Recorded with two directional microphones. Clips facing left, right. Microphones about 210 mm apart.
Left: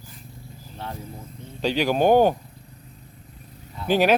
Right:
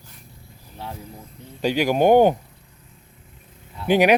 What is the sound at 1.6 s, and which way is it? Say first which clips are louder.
Speech: right 2 dB; 10° right (ahead or behind).